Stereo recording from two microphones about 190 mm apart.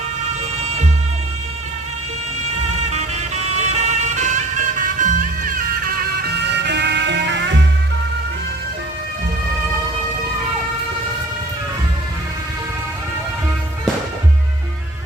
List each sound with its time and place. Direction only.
2.6 s music: 35° right (ahead or behind); by 7.6 s 70° right (ahead or behind)